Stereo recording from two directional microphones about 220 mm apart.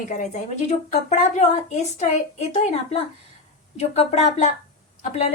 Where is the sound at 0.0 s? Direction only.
35° left (ahead or behind).